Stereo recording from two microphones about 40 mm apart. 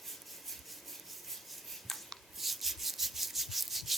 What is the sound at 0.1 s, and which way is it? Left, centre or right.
Rub, centre.